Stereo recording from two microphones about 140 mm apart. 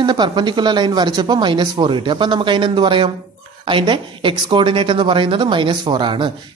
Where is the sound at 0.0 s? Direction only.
30° right (ahead or behind).